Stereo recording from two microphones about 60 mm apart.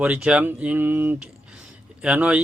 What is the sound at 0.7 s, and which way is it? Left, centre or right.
Speech, right.